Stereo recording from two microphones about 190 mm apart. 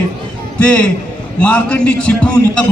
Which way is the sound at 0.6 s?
5° left (ahead or behind).